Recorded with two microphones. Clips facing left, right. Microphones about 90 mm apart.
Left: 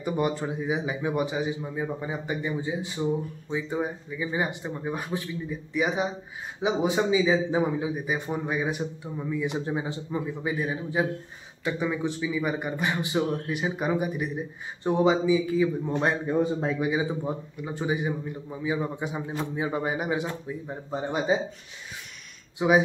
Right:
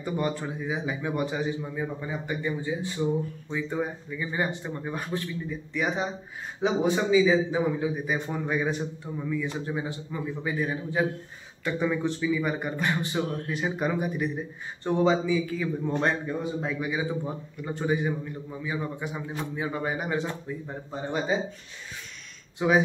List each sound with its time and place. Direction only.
0.0 s a man's voice: 15° left (ahead or behind)
7.9 s a man's voice: 10° left (ahead or behind)
17.6 s a man's voice: 10° left (ahead or behind)
20.9 s a man's voice: 20° left (ahead or behind)
22.6 s a man's voice: 10° left (ahead or behind)